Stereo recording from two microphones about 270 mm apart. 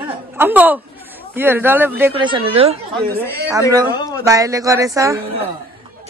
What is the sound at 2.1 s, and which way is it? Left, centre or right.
Speech, centre.